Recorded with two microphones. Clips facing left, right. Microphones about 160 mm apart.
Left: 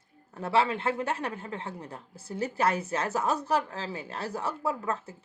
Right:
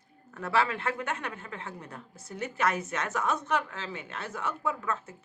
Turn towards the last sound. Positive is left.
turn(degrees=35)  # may be behind; listen again after turning